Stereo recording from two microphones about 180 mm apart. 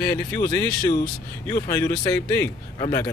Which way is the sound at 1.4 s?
15° left (ahead or behind).